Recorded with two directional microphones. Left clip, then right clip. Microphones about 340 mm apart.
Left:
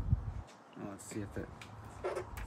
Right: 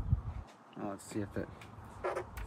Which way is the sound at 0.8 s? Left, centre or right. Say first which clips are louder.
Right 4 dB; centre.